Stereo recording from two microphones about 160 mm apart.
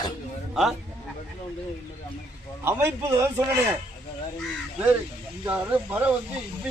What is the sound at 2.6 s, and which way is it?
Speech, 15° right (ahead or behind).